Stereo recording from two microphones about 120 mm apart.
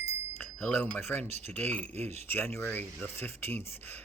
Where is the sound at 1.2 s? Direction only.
65° right (ahead or behind).